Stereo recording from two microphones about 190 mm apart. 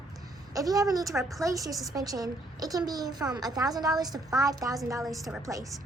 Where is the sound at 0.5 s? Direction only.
20° right (ahead or behind).